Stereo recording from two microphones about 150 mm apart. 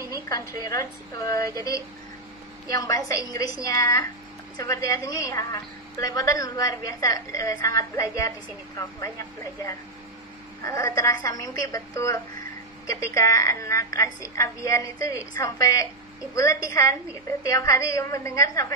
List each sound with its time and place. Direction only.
0.1 s a woman's voice: 25° left (ahead or behind)
2.7 s a woman's voice: 25° left (ahead or behind)
10.6 s a woman's voice: 20° left (ahead or behind)